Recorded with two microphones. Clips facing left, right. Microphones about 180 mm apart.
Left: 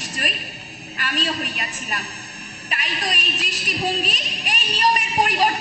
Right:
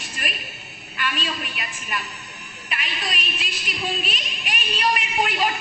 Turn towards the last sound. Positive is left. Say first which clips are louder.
# left 3 dB
turn(degrees=40)  # may be behind; listen again after turning